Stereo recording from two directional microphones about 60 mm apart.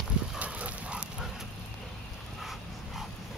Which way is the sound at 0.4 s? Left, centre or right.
Right.